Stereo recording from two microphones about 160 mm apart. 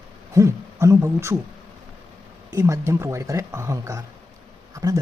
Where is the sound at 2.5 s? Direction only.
20° right (ahead or behind).